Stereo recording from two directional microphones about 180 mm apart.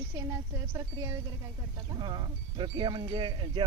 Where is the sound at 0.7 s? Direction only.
20° right (ahead or behind).